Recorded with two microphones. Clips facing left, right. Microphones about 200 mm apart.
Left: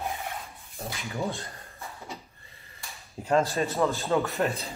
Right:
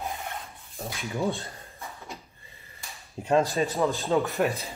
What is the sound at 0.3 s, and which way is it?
Filing, centre (ahead or behind).